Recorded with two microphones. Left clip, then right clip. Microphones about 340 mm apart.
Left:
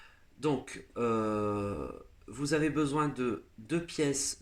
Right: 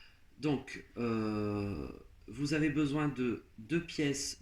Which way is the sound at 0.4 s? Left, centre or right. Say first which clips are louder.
Left 3 dB; left.